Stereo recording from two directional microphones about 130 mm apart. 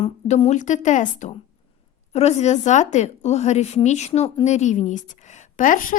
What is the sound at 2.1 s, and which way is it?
A woman's voice, 60° left (ahead or behind).